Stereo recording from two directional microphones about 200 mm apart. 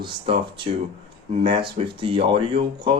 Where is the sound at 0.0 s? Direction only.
25° right (ahead or behind).